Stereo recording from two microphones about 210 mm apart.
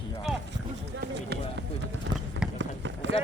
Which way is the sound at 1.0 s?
50° right (ahead or behind).